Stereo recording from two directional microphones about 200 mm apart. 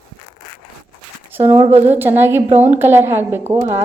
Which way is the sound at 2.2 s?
10° right (ahead or behind).